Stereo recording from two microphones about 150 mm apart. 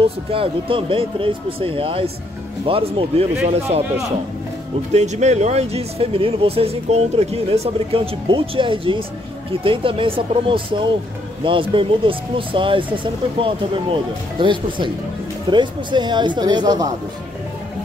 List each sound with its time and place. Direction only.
0.3 s speech: 35° right (ahead or behind)
4.9 s speech: 50° right (ahead or behind); by 16.8 s 30° right (ahead or behind)